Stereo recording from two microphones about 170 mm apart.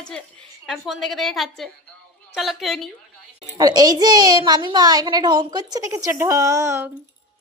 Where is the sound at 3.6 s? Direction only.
25° right (ahead or behind).